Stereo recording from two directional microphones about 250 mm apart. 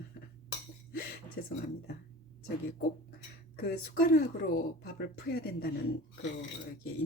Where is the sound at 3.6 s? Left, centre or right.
Left.